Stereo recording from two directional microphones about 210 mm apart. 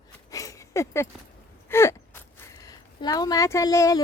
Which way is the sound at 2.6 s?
20° left (ahead or behind).